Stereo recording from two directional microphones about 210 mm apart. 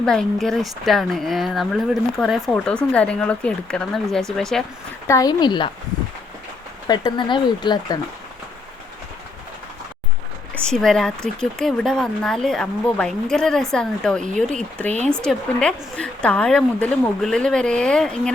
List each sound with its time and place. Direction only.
0.0 s speech: 5° left (ahead or behind)
5.0 s speech: 15° left (ahead or behind)
6.8 s speech: 20° left (ahead or behind)
10.5 s speech: 5° left (ahead or behind)